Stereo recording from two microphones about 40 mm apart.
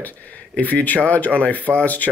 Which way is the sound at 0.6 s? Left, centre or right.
Left.